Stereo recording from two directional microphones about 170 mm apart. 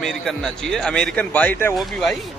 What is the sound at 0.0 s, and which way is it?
Speech, centre (ahead or behind).